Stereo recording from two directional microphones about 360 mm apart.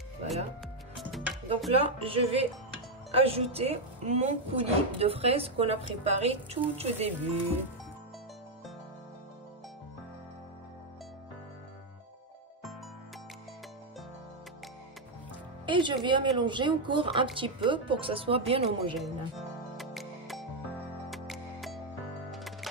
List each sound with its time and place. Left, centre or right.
0.9 s music: centre
1.7 s speech: centre
15.6 s speech: centre
18.9 s music: centre